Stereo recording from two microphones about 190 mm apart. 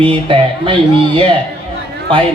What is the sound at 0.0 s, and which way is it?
Speech, 30° right (ahead or behind).